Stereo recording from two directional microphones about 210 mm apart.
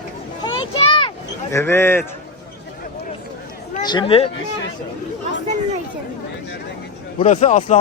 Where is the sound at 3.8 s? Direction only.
20° left (ahead or behind).